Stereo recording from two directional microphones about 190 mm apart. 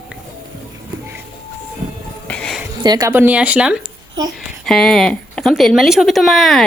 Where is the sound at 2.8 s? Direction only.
20° right (ahead or behind).